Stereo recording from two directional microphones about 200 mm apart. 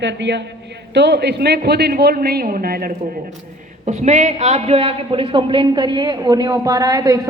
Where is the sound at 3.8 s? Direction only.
35° right (ahead or behind).